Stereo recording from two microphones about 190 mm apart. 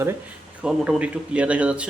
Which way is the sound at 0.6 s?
5° right (ahead or behind).